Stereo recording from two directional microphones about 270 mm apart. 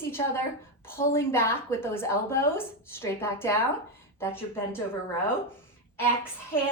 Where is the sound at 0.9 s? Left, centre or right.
Centre.